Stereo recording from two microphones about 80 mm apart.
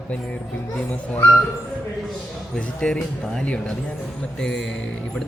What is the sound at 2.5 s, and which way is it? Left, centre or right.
Speech, centre.